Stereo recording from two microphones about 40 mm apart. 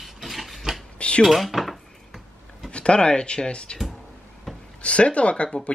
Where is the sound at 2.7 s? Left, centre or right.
Left.